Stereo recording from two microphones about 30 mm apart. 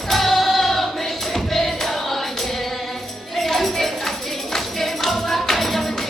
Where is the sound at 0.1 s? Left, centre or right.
Centre.